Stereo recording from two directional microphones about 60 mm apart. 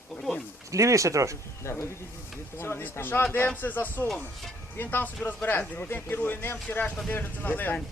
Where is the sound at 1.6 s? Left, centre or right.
Left.